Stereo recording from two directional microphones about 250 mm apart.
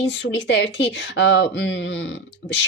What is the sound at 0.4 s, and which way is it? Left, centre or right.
Speech, left.